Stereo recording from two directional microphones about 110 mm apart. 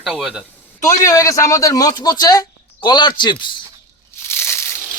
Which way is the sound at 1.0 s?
30° left (ahead or behind).